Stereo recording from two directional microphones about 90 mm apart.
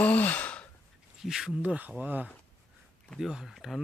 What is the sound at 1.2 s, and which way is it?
Speech, 5° right (ahead or behind).